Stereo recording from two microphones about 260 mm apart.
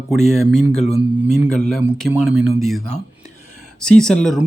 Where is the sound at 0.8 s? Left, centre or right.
Left.